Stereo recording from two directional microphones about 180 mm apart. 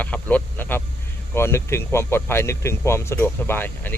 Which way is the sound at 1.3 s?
15° left (ahead or behind).